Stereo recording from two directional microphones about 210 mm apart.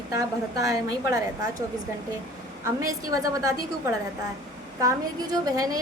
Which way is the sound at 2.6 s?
15° right (ahead or behind).